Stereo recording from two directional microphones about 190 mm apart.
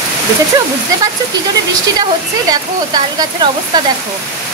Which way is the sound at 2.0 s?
20° right (ahead or behind).